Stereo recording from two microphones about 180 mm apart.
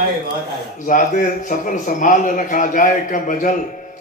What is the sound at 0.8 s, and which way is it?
Speech, 45° left (ahead or behind).